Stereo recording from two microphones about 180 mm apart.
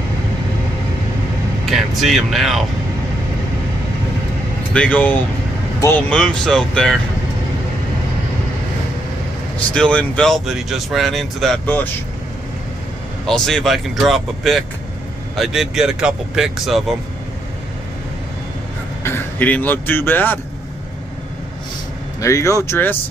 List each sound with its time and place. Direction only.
1.7 s speech: centre (ahead or behind)
4.7 s speech: 10° left (ahead or behind)
9.8 s speech: 5° left (ahead or behind)
13.3 s speech: 5° left (ahead or behind)
19.0 s speech: 10° left (ahead or behind)
22.2 s speech: 15° left (ahead or behind)